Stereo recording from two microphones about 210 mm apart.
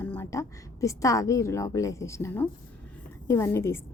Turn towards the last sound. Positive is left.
turn(degrees=10)  # may be behind; listen again after turning